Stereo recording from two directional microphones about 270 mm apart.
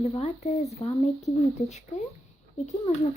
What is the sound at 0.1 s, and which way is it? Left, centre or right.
Speech, left.